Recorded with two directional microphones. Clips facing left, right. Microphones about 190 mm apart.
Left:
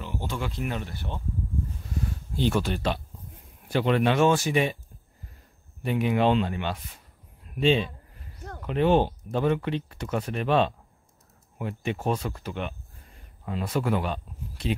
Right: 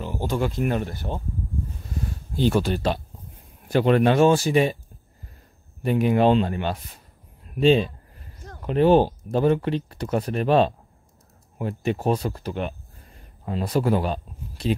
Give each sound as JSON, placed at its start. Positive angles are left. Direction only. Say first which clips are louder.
{"t": 0.0, "sound": "speech", "louder": "right 7 dB", "side_deg": -40}
{"t": 2.3, "sound": "speech", "louder": "right 4 dB", "side_deg": -40}
{"t": 5.8, "sound": "speech", "louder": "right 4 dB", "side_deg": -40}